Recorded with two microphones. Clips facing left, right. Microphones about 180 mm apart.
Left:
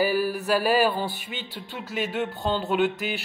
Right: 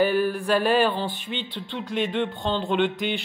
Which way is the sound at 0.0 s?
5° left (ahead or behind).